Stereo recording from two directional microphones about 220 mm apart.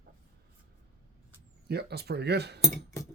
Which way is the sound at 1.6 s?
45° right (ahead or behind).